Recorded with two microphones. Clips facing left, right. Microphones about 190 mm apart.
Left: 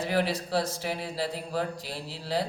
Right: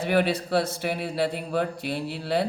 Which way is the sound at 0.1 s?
60° right (ahead or behind).